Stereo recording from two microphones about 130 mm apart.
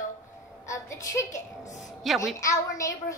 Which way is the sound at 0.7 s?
25° left (ahead or behind).